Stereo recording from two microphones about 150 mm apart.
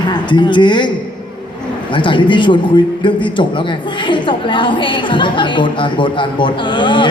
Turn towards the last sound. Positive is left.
turn(degrees=35)  # may be behind; listen again after turning